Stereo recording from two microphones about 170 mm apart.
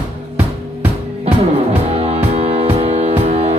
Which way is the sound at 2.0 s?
35° right (ahead or behind).